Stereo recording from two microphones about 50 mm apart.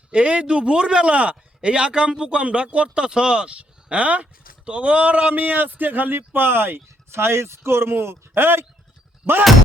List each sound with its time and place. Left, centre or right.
0.1 s a man's voice: right